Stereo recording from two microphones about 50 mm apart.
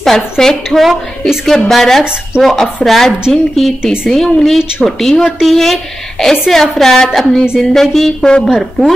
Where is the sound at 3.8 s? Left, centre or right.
Centre.